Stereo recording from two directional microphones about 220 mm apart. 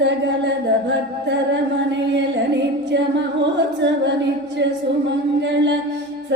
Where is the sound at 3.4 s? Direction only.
55° right (ahead or behind).